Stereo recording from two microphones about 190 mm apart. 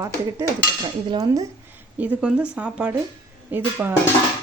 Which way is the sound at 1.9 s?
10° right (ahead or behind).